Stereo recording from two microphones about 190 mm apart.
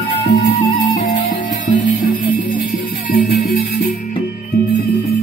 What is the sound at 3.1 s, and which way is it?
Music, 50° left (ahead or behind).